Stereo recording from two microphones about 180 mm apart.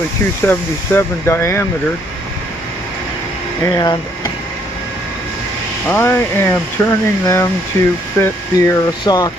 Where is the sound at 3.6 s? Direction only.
20° left (ahead or behind).